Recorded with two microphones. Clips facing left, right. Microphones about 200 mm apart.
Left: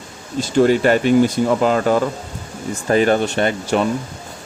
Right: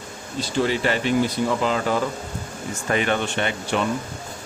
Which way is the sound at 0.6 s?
50° left (ahead or behind).